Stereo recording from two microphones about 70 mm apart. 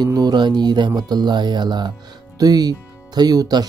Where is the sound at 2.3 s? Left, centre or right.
Right.